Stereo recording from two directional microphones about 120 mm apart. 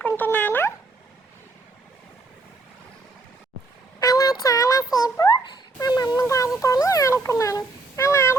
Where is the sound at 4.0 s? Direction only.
30° left (ahead or behind).